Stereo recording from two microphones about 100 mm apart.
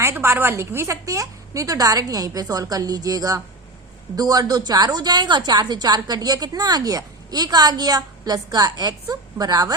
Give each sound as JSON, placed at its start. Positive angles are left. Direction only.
{"t": 0.0, "sound": "a woman's voice", "side_deg": -25}